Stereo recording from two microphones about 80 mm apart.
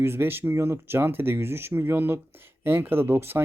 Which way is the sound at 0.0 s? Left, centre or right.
Right.